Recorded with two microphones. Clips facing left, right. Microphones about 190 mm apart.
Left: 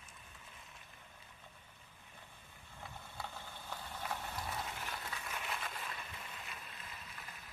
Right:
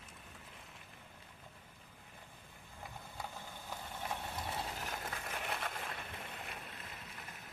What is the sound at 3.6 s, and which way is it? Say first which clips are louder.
Vehicle: right 1 dB; 20° right (ahead or behind).